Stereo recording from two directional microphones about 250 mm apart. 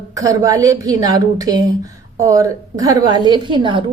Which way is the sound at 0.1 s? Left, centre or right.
Centre.